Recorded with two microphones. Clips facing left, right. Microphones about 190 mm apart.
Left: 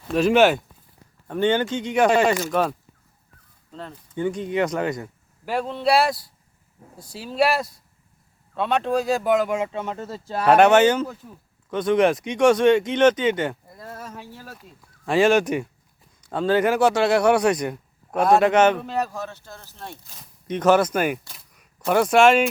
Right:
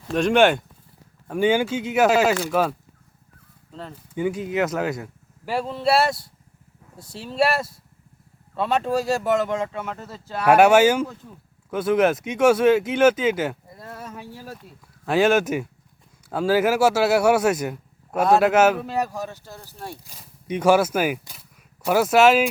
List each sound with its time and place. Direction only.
0.1 s speech: 5° left (ahead or behind)
1.3 s speech: 10° right (ahead or behind)
9.5 s speech: 10° left (ahead or behind)
10.0 s speech: 30° left (ahead or behind)
10.4 s speech: 10° right (ahead or behind)